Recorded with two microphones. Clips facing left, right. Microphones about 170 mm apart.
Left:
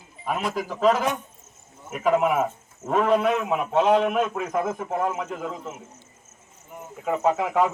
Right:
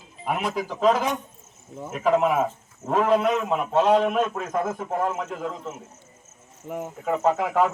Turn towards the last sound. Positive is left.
turn(degrees=0)  # may be behind; listen again after turning